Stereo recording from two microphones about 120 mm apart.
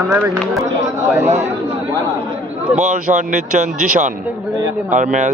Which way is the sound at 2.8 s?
85° right.